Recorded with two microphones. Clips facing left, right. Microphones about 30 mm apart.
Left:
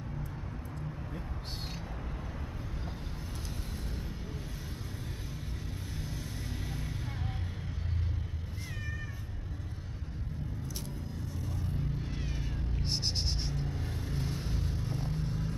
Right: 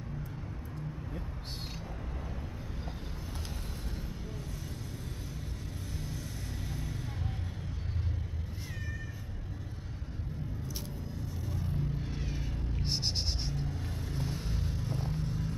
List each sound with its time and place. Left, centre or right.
6.7 s vehicle: centre
11.4 s a sound: centre
13.7 s vehicle: centre